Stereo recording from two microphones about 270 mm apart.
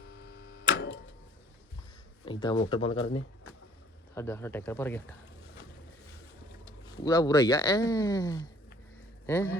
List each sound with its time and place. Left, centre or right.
0.0 s a sound: left
2.2 s speech: centre
4.1 s speech: centre
6.8 s speech: centre